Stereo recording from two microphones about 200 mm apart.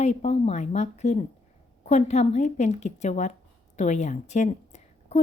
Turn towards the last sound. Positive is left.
turn(degrees=35)  # may be behind; listen again after turning